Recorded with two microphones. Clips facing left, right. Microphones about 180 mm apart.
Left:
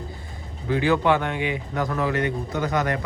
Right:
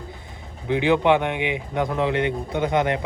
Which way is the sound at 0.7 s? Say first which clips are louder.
Right 2 dB; 20° right (ahead or behind).